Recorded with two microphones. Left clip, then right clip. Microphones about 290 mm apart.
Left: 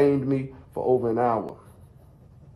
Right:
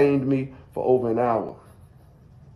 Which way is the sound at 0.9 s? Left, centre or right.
Centre.